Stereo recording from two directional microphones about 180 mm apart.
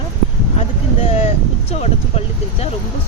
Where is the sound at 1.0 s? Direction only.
35° left (ahead or behind).